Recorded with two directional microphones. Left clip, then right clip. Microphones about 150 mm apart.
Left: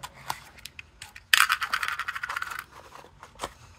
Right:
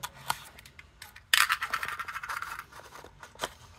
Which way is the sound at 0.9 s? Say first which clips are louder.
Left 4 dB; 30° left (ahead or behind).